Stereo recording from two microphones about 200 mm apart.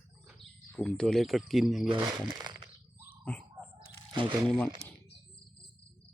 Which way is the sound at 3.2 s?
5° left (ahead or behind).